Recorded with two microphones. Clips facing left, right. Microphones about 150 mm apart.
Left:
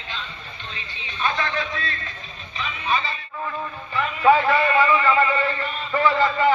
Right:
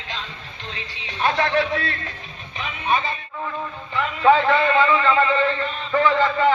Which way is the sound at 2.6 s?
50° right (ahead or behind).